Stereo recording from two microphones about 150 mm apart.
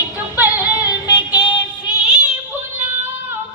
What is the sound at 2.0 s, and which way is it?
Child singing, 10° right (ahead or behind).